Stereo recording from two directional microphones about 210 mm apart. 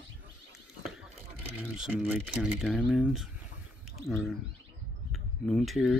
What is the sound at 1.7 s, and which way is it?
Speech, 5° right (ahead or behind).